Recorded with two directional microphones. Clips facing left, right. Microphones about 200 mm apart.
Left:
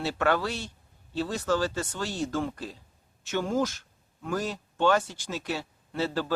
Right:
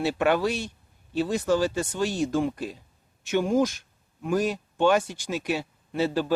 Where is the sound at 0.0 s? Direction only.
15° right (ahead or behind).